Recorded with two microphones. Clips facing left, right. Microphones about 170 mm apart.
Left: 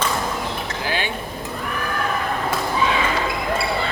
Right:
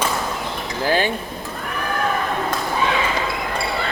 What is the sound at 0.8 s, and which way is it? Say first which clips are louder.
Dishes: right 7 dB; 40° right (ahead or behind).